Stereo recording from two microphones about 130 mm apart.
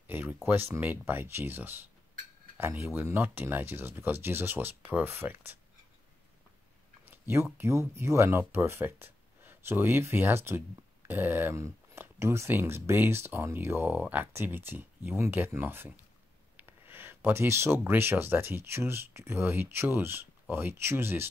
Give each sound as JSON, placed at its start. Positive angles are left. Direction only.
{"t": 0.0, "sound": "speech", "side_deg": -15}
{"t": 7.1, "sound": "speech", "side_deg": -15}